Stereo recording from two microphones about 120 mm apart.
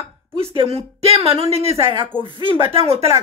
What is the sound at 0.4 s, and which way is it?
Speech, 55° right (ahead or behind).